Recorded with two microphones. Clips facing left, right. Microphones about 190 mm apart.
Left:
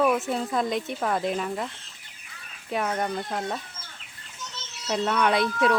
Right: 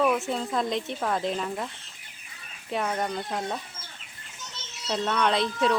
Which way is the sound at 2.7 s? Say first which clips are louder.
Left 1 dB; centre (ahead or behind).